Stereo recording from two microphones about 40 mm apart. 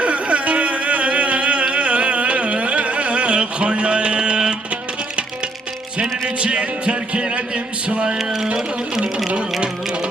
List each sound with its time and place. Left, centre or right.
0.0 s a sound: right
6.0 s speech: right
8.2 s music: centre